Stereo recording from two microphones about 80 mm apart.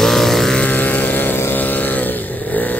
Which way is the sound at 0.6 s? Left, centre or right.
Left.